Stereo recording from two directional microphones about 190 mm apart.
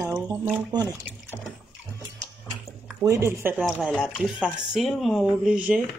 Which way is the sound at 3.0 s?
15° right (ahead or behind).